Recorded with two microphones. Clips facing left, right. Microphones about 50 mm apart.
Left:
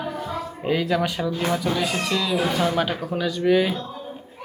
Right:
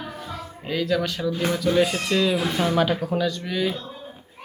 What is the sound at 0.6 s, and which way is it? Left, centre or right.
Speech, centre.